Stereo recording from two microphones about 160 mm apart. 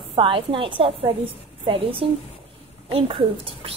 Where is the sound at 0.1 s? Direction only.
35° right (ahead or behind).